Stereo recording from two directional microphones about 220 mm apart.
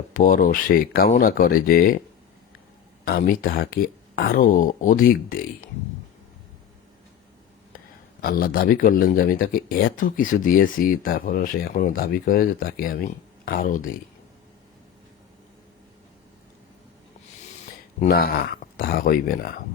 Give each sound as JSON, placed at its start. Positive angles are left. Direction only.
{"t": 0.1, "sound": "speech", "side_deg": 40}
{"t": 3.0, "sound": "speech", "side_deg": 45}
{"t": 8.2, "sound": "speech", "side_deg": 45}
{"t": 18.0, "sound": "speech", "side_deg": 45}